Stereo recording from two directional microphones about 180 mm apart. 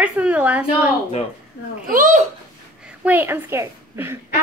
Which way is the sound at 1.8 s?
50° right (ahead or behind).